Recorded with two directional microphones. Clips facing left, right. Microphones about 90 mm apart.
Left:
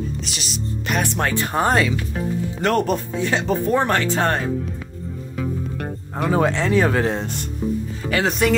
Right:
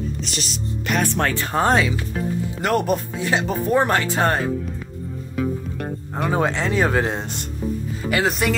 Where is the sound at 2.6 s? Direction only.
10° right (ahead or behind).